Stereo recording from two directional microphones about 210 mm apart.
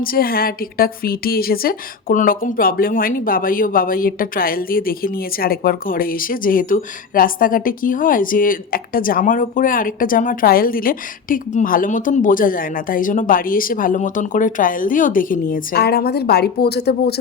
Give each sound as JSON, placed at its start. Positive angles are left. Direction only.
{"t": 0.0, "sound": "a woman's voice", "side_deg": 45}